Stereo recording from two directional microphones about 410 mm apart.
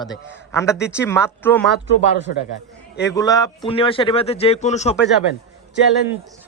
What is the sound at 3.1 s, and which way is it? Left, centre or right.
Speech, centre.